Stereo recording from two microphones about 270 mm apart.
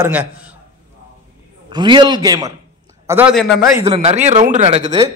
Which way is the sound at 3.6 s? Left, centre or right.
Centre.